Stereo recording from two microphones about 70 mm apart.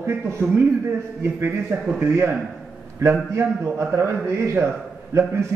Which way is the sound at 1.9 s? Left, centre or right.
Right.